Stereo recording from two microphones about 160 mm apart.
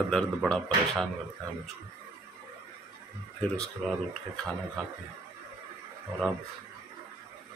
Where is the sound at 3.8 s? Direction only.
Centre (ahead or behind).